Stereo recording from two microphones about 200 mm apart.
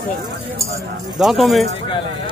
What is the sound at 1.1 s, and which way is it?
Speech, centre (ahead or behind).